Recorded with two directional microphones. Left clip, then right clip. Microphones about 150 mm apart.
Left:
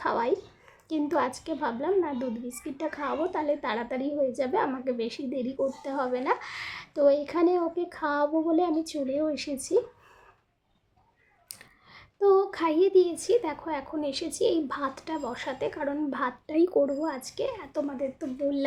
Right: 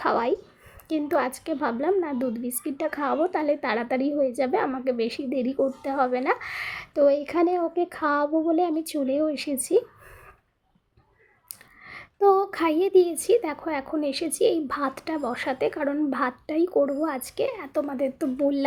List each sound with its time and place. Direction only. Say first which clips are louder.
0.0 s a child's voice: right 3 dB; 30° right (ahead or behind)
11.9 s a child's voice: right 3 dB; 25° right (ahead or behind)
16.5 s speech: even; centre (ahead or behind)
16.8 s a child's voice: right 3 dB; 35° right (ahead or behind)